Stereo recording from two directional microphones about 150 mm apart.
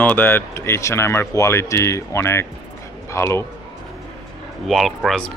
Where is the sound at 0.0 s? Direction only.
15° left (ahead or behind).